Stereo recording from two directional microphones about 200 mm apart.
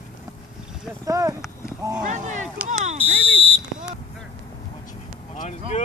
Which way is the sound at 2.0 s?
40° right (ahead or behind).